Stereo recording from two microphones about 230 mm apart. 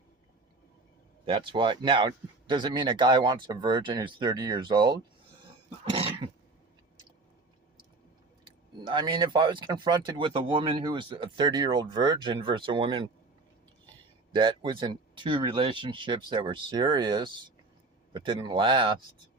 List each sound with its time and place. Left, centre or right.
1.2 s speech: right
5.8 s dog: right
8.4 s speech: right
14.3 s speech: right